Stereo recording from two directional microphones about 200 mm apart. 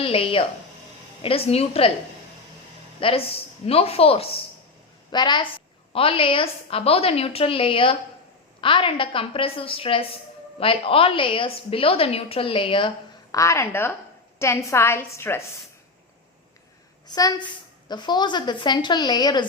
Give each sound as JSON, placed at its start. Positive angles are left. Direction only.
{"t": 0.0, "sound": "a woman's voice", "side_deg": 30}
{"t": 3.0, "sound": "a woman's voice", "side_deg": 30}
{"t": 13.3, "sound": "a woman's voice", "side_deg": 15}
{"t": 17.1, "sound": "a woman's voice", "side_deg": 20}